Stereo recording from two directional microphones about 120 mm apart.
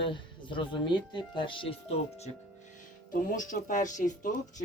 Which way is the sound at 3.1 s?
90° left.